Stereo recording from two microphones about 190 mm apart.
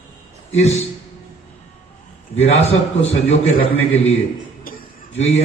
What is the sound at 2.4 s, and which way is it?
A man's voice, 35° left (ahead or behind).